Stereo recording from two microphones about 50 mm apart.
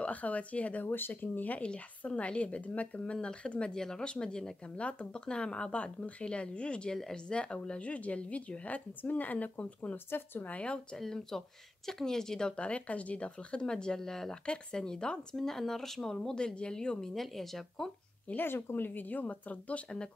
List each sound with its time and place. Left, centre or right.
0.0 s a woman's voice: left
0.8 s speech: left
1.6 s a woman's voice: left
11.0 s speech: centre
17.1 s speech: centre
18.3 s speech: left